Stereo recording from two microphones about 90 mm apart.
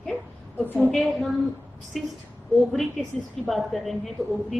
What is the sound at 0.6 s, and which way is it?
Speech, 20° right (ahead or behind).